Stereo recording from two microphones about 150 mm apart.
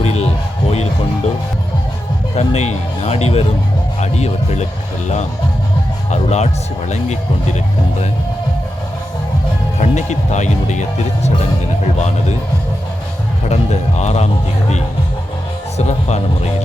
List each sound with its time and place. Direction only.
0.0 s music: 45° left (ahead or behind)
2.3 s speech: 45° left (ahead or behind)
6.1 s speech: 50° left (ahead or behind)
9.7 s speech: 50° left (ahead or behind)
13.5 s speech: 50° left (ahead or behind)
15.8 s speech: 50° left (ahead or behind)